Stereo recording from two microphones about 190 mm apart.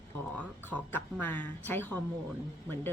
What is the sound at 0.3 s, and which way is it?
A woman's voice, 10° left (ahead or behind).